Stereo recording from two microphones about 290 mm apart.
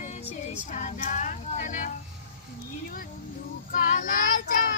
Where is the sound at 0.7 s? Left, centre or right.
Left.